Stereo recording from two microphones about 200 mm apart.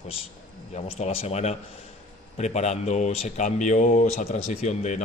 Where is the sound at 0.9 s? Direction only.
35° left (ahead or behind).